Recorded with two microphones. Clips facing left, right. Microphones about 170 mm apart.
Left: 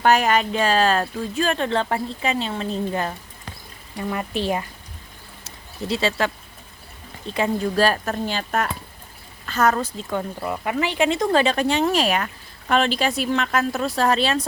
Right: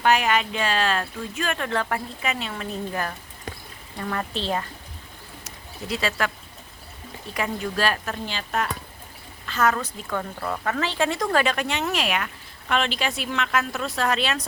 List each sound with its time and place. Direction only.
0.0 s speech: 40° left (ahead or behind); by 3.2 s 25° left (ahead or behind)
3.9 s speech: 15° left (ahead or behind)
5.5 s speech: 30° left (ahead or behind)
7.3 s speech: 30° left (ahead or behind)
10.0 s speech: 20° left (ahead or behind)